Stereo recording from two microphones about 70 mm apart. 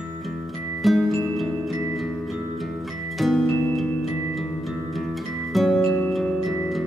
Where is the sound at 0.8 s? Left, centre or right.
Centre.